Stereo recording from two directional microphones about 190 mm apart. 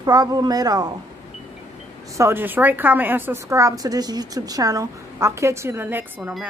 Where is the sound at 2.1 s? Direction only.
15° right (ahead or behind).